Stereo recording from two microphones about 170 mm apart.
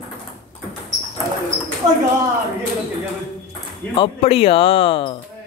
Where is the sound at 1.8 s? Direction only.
25° right (ahead or behind).